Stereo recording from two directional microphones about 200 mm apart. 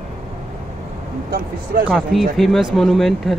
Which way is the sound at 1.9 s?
5° right (ahead or behind).